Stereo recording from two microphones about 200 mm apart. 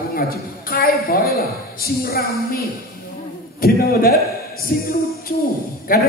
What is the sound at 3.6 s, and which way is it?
A man's voice, 50° left (ahead or behind).